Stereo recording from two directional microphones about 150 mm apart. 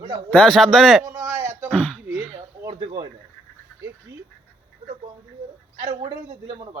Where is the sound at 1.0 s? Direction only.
20° right (ahead or behind).